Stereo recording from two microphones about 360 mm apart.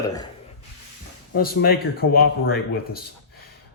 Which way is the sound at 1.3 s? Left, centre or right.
Left.